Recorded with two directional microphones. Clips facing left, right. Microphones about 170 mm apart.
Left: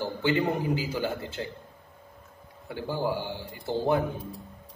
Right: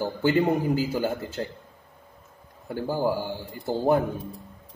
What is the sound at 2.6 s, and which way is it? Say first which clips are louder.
A man's voice: right 4 dB; 45° right (ahead or behind).